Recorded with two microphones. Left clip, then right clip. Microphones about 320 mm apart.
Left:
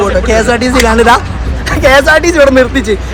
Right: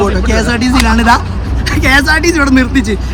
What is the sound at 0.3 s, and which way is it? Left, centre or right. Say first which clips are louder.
Speech: left 4 dB; centre.